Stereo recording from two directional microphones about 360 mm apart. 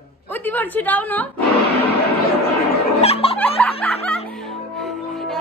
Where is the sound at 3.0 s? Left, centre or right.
Centre.